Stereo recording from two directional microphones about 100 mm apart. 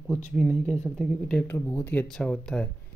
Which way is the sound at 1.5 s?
25° left (ahead or behind).